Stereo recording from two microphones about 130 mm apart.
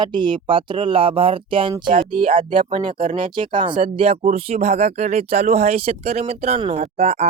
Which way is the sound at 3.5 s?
35° right (ahead or behind).